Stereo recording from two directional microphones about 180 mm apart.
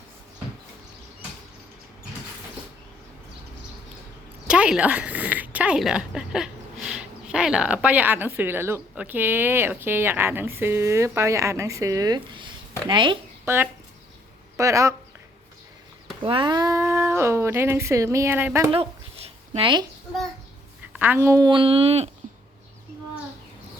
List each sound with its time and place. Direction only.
4.4 s a woman's voice: 5° right (ahead or behind); by 13.1 s 25° right (ahead or behind)
13.4 s speech: 15° right (ahead or behind)
16.2 s speech: 25° right (ahead or behind)
18.7 s a sound: 30° right (ahead or behind)
21.0 s a woman's voice: 10° right (ahead or behind); by 22.1 s 35° right (ahead or behind)